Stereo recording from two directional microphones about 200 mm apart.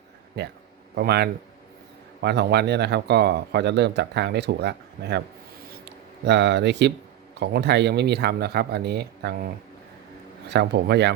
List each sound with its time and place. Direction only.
0.9 s a man's voice: 55° right (ahead or behind)
5.7 s a sound: 60° right (ahead or behind)
7.3 s a man's voice: 55° right (ahead or behind)
10.5 s a man's voice: 55° right (ahead or behind)